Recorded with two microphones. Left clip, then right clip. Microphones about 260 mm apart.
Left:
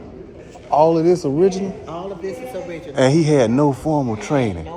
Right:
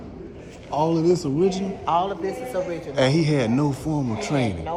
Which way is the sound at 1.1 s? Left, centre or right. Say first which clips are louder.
Left 5 dB; centre.